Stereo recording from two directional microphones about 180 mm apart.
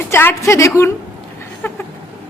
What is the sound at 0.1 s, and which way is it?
Speech, 15° left (ahead or behind).